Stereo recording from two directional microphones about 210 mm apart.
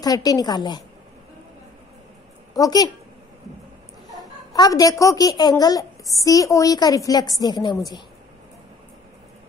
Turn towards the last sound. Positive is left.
turn(degrees=20)  # may be behind; listen again after turning